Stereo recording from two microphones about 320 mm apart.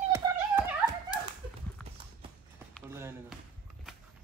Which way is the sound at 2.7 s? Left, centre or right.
Centre.